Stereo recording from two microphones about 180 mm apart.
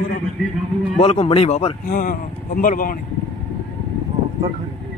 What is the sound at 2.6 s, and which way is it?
Speech, 50° left (ahead or behind).